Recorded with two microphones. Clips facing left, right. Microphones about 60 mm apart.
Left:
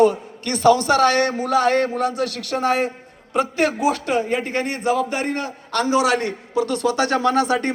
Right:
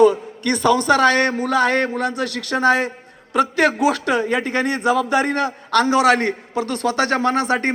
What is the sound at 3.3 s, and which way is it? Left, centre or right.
A man's voice, right.